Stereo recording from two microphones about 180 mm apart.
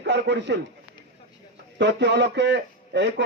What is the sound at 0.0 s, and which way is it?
Speech, 70° right (ahead or behind).